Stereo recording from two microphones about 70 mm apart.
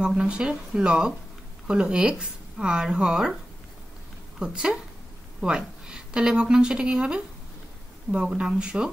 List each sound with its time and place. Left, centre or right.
0.0 s a woman's voice: centre
4.4 s a woman's voice: centre